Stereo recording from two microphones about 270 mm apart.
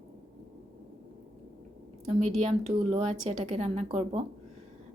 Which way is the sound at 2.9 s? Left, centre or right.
Right.